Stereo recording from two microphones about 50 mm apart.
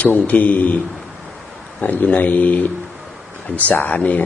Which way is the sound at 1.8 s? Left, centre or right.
Left.